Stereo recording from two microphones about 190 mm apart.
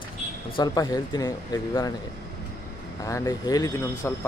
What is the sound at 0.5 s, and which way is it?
Speech, 20° left (ahead or behind).